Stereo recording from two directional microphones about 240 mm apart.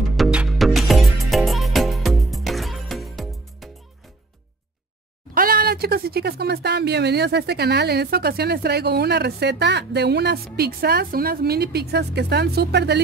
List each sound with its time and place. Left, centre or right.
0.2 s music: centre
5.3 s speech: right